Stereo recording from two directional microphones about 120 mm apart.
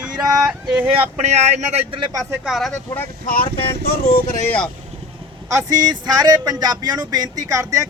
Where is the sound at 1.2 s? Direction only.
70° right (ahead or behind).